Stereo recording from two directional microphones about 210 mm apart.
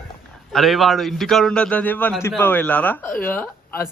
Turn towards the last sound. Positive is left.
turn(degrees=10)  # may be behind; listen again after turning